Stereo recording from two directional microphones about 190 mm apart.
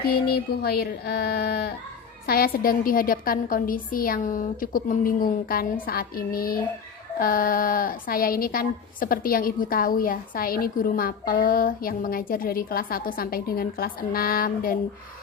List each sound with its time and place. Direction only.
0.3 s speech: 55° left (ahead or behind)